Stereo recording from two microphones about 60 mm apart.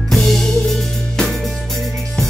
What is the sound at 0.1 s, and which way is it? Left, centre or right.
Music, centre.